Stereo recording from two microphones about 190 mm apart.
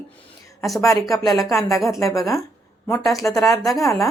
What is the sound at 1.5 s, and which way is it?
Speech, 15° left (ahead or behind).